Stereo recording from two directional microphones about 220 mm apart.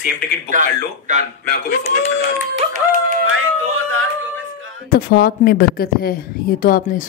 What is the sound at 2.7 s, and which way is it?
Music, 40° right (ahead or behind).